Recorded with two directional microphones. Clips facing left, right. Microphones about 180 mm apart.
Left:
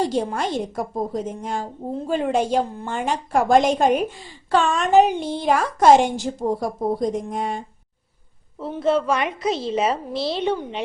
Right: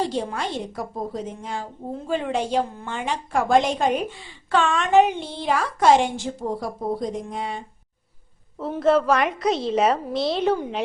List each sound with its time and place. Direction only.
0.1 s a woman's voice: 45° left (ahead or behind)
8.6 s a woman's voice: centre (ahead or behind)